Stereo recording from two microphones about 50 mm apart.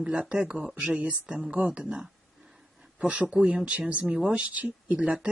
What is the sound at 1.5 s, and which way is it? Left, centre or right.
Speech, right.